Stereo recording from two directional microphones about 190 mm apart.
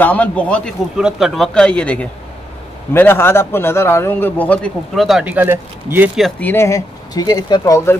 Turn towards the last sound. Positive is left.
turn(degrees=15)  # may be behind; listen again after turning